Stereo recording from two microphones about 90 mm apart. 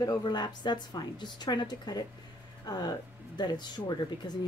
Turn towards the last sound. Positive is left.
turn(degrees=50)  # may be behind; listen again after turning